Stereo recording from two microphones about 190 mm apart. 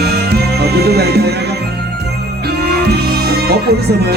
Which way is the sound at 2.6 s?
60° right (ahead or behind).